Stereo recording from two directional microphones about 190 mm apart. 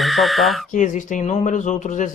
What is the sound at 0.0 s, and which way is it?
Speech, centre (ahead or behind).